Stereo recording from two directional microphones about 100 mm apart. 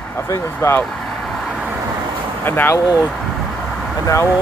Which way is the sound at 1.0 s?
Centre (ahead or behind).